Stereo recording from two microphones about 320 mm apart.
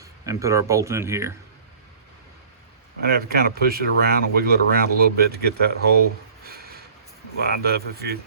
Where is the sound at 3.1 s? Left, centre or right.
Right.